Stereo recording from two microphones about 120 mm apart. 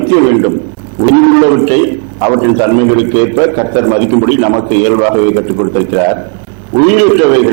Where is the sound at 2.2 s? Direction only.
25° right (ahead or behind).